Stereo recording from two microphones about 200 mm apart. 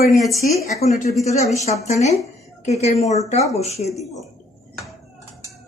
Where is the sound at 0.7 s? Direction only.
35° left (ahead or behind).